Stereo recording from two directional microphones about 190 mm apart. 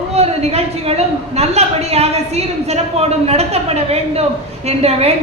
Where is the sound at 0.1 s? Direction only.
35° right (ahead or behind).